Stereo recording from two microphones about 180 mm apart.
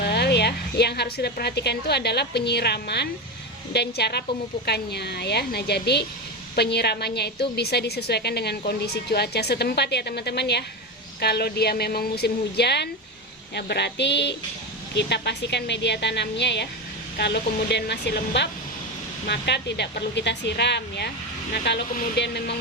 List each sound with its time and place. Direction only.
0.0 s a woman's voice: 65° left (ahead or behind)